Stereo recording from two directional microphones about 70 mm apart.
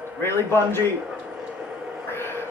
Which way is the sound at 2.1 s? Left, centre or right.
Left.